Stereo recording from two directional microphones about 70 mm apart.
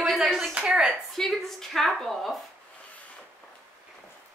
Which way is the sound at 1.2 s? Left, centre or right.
Centre.